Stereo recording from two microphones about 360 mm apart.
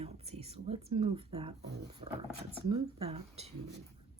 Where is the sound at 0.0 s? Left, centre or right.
Centre.